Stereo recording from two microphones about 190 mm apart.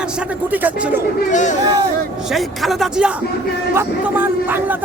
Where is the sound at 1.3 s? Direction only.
40° left (ahead or behind).